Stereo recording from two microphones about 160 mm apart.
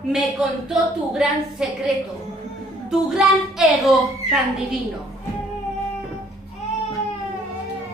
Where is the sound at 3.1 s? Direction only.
Centre (ahead or behind).